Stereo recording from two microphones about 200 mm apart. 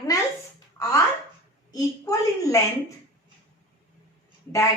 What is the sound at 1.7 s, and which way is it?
Speech, 20° left (ahead or behind).